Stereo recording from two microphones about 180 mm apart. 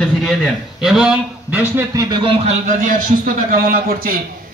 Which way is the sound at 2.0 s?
30° right (ahead or behind).